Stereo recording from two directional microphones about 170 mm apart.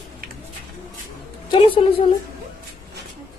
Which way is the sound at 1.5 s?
30° left (ahead or behind).